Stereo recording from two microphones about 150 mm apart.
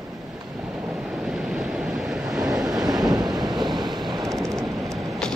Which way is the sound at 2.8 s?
25° right (ahead or behind).